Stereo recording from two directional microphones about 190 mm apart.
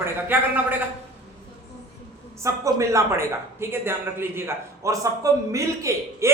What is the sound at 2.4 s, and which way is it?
A man's voice, 15° right (ahead or behind).